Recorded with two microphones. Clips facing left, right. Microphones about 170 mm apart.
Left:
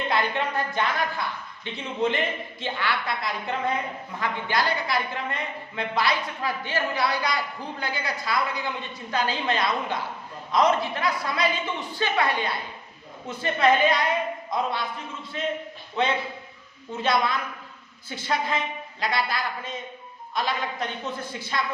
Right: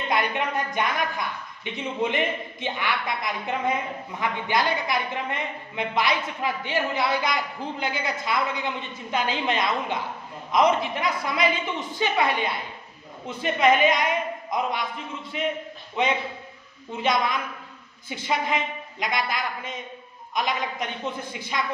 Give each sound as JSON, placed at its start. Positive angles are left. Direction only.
{"t": 0.1, "sound": "a woman's voice", "side_deg": -15}
{"t": 17.0, "sound": "a woman's voice", "side_deg": -15}